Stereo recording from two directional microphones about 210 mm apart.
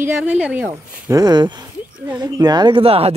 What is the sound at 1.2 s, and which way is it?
Speech, 20° right (ahead or behind).